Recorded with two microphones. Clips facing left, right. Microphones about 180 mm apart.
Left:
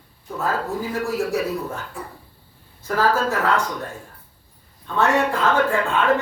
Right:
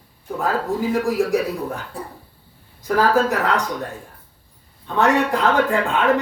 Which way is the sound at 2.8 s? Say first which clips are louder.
Right 3 dB; 15° right (ahead or behind).